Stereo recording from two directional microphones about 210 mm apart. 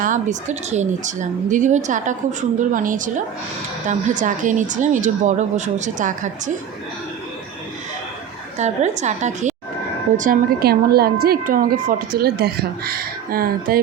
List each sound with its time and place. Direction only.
0.0 s speech: 35° right (ahead or behind)
8.5 s speech: 35° right (ahead or behind)